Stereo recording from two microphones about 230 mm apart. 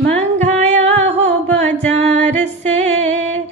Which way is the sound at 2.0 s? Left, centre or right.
Right.